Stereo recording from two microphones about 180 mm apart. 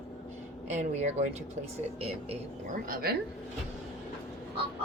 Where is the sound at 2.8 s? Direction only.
55° right (ahead or behind).